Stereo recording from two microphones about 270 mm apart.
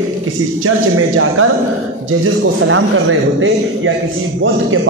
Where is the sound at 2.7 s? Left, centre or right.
Right.